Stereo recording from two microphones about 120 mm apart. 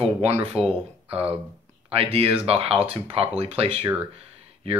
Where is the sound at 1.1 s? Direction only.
55° right (ahead or behind).